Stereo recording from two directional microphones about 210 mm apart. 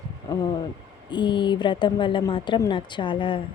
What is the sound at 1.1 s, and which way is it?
Speech, 20° left (ahead or behind).